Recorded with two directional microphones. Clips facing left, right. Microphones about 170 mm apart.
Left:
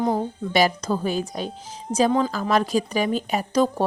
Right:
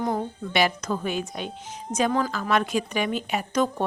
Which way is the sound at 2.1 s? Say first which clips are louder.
Left 4 dB; 25° left (ahead or behind).